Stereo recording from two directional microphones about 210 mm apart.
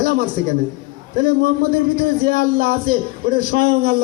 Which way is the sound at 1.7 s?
45° right (ahead or behind).